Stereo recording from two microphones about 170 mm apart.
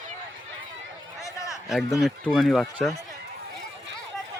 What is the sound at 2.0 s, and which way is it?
Speech, centre (ahead or behind).